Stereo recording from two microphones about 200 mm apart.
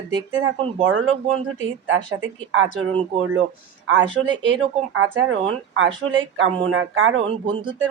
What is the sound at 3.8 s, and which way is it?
Speech, 65° right (ahead or behind).